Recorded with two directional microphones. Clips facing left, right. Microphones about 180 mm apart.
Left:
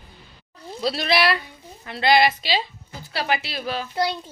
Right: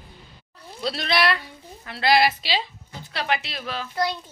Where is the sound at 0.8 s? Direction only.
5° left (ahead or behind).